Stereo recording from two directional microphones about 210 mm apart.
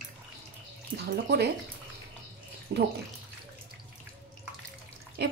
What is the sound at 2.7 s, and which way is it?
Speech, 55° right (ahead or behind).